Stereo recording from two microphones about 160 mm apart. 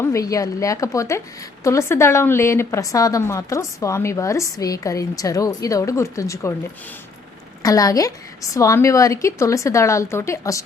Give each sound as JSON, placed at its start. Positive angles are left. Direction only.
{"t": 0.0, "sound": "a woman's voice", "side_deg": 20}
{"t": 7.6, "sound": "a woman's voice", "side_deg": 20}